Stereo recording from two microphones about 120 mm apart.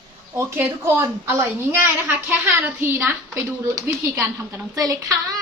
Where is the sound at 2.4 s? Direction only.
15° right (ahead or behind).